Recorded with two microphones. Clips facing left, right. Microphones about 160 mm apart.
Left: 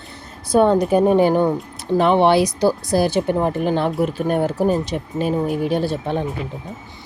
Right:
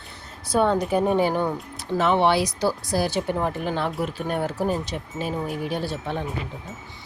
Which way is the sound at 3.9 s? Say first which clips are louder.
Left 7 dB; 45° left (ahead or behind).